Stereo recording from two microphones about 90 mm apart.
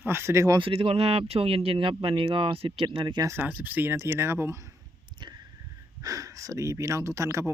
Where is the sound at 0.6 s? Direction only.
90° right; by 3.2 s 65° right (ahead or behind).